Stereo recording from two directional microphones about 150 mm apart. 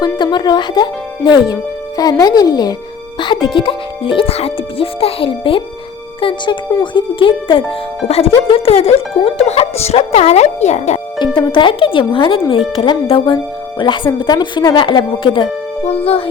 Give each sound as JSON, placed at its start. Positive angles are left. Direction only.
{"t": 0.0, "sound": "speech", "side_deg": 30}
{"t": 11.3, "sound": "speech", "side_deg": 30}